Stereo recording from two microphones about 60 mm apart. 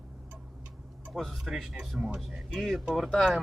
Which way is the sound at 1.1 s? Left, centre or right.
Centre.